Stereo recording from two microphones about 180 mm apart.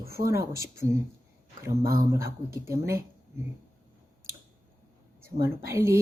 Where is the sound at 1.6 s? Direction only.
15° right (ahead or behind).